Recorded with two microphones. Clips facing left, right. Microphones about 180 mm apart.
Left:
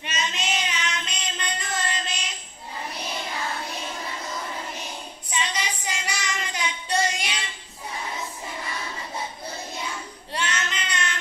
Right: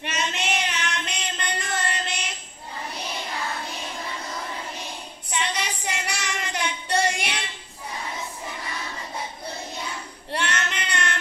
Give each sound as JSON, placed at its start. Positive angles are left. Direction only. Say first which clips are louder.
{"t": 0.0, "sound": "a sound", "louder": "right 2 dB", "side_deg": -60}
{"t": 5.3, "sound": "child singing", "louder": "right 1 dB", "side_deg": -60}
{"t": 10.3, "sound": "child singing", "louder": "right 2 dB", "side_deg": -60}